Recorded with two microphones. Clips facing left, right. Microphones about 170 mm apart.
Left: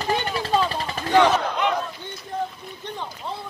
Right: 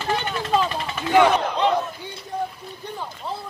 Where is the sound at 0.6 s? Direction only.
35° left (ahead or behind).